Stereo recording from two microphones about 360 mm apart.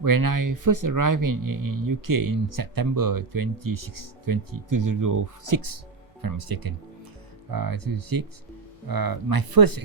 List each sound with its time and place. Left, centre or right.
0.0 s speech: right
6.2 s speech: right